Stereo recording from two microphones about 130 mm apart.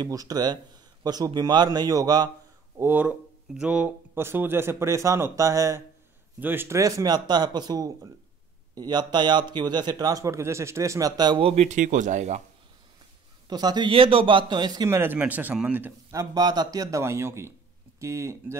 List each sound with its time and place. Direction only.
0.0 s a man's voice: 30° right (ahead or behind)
2.8 s a man's voice: 15° right (ahead or behind); by 11.4 s 35° right (ahead or behind)
11.4 s speech: 60° right (ahead or behind)
13.5 s a man's voice: 30° right (ahead or behind)
15.0 s speech: 15° right (ahead or behind)